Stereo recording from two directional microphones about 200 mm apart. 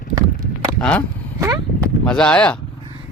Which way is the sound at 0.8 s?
5° left (ahead or behind).